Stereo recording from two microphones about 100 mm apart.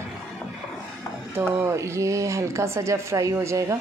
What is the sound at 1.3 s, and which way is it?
Speech, 25° right (ahead or behind).